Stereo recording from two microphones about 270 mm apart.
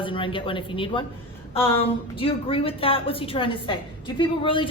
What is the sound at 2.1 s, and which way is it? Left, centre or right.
A woman's voice, left.